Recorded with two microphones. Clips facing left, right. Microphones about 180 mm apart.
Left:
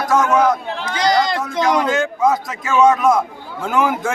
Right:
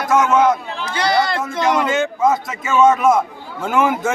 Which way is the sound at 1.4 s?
5° right (ahead or behind).